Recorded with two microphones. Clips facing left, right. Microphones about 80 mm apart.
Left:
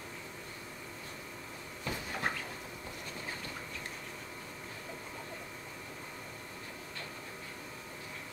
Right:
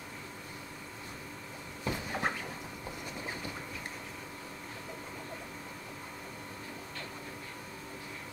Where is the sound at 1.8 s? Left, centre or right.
Right.